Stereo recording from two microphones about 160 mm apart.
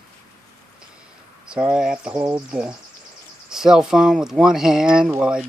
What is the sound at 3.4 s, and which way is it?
Speech, 5° right (ahead or behind).